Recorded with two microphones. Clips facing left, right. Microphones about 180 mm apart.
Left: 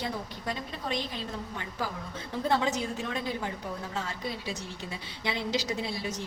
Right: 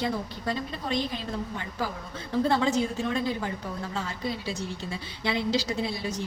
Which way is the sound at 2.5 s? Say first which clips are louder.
Right 2 dB; 15° left (ahead or behind).